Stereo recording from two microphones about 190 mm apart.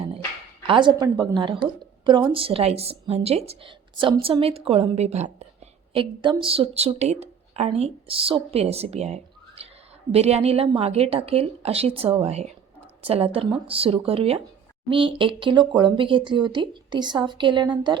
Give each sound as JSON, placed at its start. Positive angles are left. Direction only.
{"t": 0.7, "sound": "a woman's voice", "side_deg": -25}